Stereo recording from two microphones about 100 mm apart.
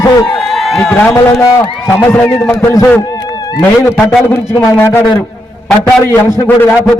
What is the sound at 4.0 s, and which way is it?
Speech, 15° left (ahead or behind).